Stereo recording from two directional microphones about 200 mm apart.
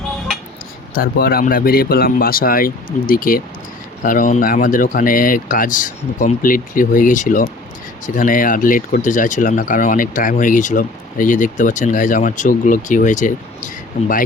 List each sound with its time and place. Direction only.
0.9 s speech: 45° left (ahead or behind)